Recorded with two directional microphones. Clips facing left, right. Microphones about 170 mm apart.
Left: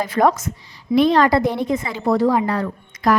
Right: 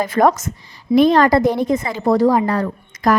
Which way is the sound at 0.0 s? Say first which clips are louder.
Right 2 dB; 45° right (ahead or behind).